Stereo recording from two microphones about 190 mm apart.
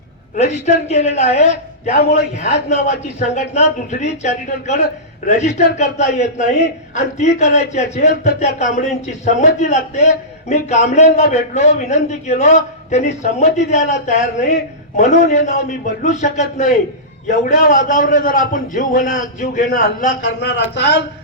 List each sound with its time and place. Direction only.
0.3 s a man's voice: 35° left (ahead or behind)
20.2 s speech: 65° left (ahead or behind)